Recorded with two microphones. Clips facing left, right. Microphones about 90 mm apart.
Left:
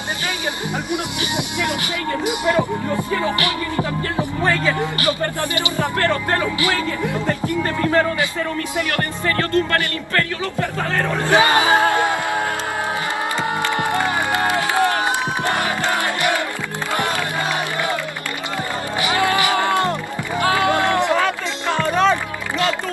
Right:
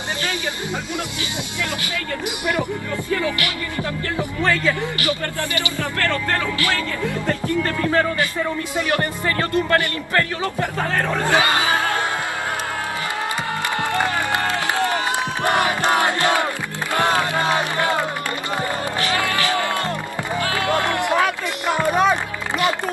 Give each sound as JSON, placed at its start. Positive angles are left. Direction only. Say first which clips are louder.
{"t": 2.2, "sound": "speech", "louder": "left 5 dB", "side_deg": 20}
{"t": 8.7, "sound": "speech", "louder": "right 3 dB", "side_deg": -20}
{"t": 11.1, "sound": "speech", "louder": "left 4 dB", "side_deg": 20}
{"t": 13.7, "sound": "music", "louder": "right 2 dB", "side_deg": 20}
{"t": 14.4, "sound": "crowd", "louder": "left 3 dB", "side_deg": 20}
{"t": 15.5, "sound": "music", "louder": "right 2 dB", "side_deg": -20}
{"t": 18.9, "sound": "music", "louder": "left 5 dB", "side_deg": 20}
{"t": 21.1, "sound": "music", "louder": "left 1 dB", "side_deg": -15}